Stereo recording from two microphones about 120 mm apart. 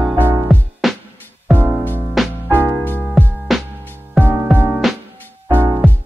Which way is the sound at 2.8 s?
15° left (ahead or behind).